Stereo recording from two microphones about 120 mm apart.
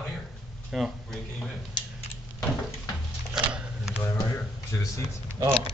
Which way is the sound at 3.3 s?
5° right (ahead or behind).